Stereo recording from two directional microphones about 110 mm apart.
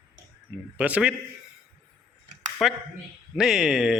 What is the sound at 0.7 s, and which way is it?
Speech, 15° right (ahead or behind).